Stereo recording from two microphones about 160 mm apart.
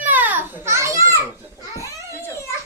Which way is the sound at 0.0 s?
10° right (ahead or behind).